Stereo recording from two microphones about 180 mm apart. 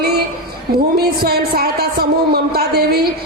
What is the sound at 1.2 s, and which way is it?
A woman's voice, 60° right (ahead or behind).